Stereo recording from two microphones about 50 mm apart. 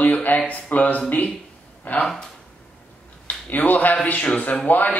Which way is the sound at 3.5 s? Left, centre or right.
Left.